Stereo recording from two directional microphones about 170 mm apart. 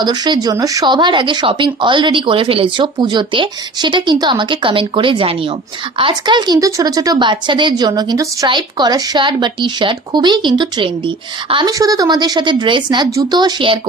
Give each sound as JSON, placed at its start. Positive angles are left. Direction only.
{"t": 0.0, "sound": "speech", "side_deg": -25}